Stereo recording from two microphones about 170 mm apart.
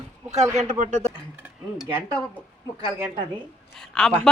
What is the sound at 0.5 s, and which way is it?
Speech, 45° right (ahead or behind).